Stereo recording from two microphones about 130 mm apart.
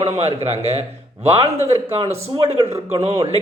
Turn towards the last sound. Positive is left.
turn(degrees=-60)  # may be behind; listen again after turning